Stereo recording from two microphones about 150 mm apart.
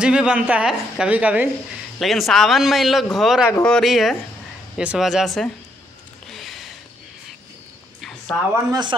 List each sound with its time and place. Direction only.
0.0 s a woman's voice: 5° right (ahead or behind)
2.0 s a man's voice: centre (ahead or behind)
3.4 s speech: 15° left (ahead or behind)
3.7 s a man's voice: centre (ahead or behind)
6.2 s a sound: centre (ahead or behind)
8.0 s a sound: 5° left (ahead or behind)